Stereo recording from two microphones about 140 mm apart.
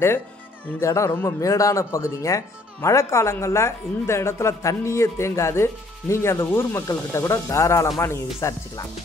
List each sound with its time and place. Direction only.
0.7 s speech: 20° left (ahead or behind)